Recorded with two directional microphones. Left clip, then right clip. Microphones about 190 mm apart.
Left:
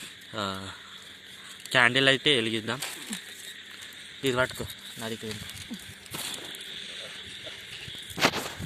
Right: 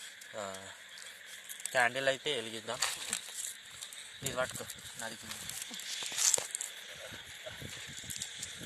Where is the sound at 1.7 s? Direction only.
Centre (ahead or behind).